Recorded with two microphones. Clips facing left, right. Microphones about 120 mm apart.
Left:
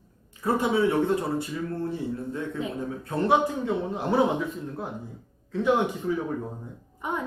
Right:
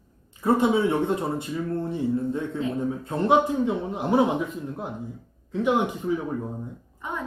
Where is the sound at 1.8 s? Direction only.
25° right (ahead or behind).